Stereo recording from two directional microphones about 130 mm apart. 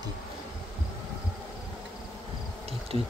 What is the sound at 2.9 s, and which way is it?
Speech, 45° right (ahead or behind).